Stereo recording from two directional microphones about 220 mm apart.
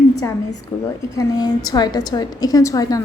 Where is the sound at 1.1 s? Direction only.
20° left (ahead or behind).